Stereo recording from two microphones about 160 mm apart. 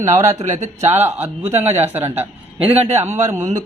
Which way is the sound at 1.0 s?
15° right (ahead or behind).